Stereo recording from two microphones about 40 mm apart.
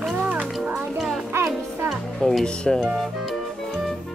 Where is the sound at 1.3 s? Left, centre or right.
Right.